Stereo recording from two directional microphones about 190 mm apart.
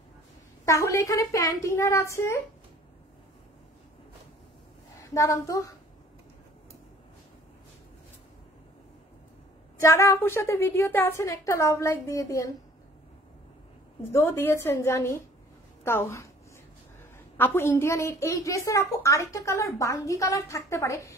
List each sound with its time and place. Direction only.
0.7 s a woman's voice: 15° left (ahead or behind)
5.1 s a woman's voice: 15° left (ahead or behind)
9.8 s a woman's voice: 15° left (ahead or behind)
14.1 s a woman's voice: 10° left (ahead or behind)
17.4 s a woman's voice: 10° left (ahead or behind)